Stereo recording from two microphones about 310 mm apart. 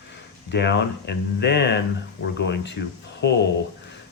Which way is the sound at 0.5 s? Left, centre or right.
Left.